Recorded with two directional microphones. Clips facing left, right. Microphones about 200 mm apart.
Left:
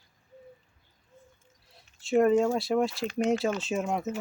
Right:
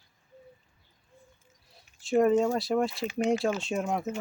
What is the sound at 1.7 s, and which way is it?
Speech, centre (ahead or behind).